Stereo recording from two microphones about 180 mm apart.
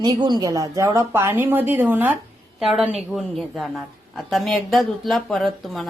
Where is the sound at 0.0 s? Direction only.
25° right (ahead or behind).